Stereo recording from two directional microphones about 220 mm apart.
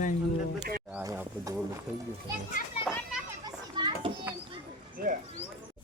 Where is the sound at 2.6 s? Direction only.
40° left (ahead or behind).